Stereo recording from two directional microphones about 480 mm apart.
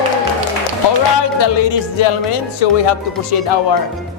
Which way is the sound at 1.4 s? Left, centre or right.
Left.